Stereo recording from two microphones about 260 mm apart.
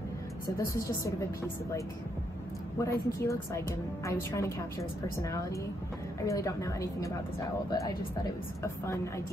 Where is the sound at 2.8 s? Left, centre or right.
Centre.